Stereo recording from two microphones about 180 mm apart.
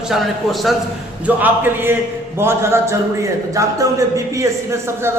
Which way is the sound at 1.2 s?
10° right (ahead or behind).